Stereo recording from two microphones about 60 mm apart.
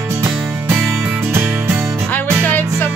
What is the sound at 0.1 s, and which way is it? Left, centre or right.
Music, right.